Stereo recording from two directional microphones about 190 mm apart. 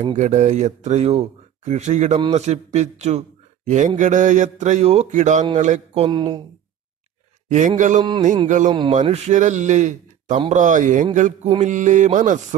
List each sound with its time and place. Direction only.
0.1 s speech: 40° right (ahead or behind)
6.0 s speech: 25° right (ahead or behind)
7.4 s speech: 40° right (ahead or behind)
8.0 s speech: 25° right (ahead or behind)
8.5 s speech: 40° right (ahead or behind)